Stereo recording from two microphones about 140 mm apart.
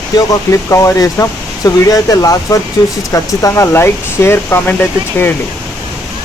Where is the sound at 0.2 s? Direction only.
25° left (ahead or behind).